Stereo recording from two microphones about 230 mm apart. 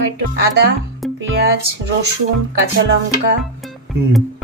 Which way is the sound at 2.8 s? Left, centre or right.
Right.